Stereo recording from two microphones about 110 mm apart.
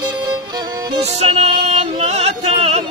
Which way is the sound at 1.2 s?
70° right (ahead or behind).